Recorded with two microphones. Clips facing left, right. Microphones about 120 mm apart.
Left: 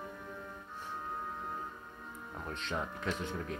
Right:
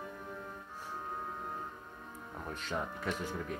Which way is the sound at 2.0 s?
35° right (ahead or behind).